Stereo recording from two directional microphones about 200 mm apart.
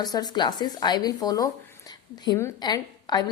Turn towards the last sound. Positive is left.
turn(degrees=20)  # may be behind; listen again after turning